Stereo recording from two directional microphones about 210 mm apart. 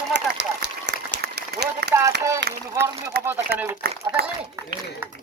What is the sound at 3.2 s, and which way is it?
Speech, 45° right (ahead or behind).